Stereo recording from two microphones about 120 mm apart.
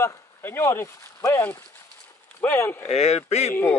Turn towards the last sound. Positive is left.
turn(degrees=65)  # may be behind; listen again after turning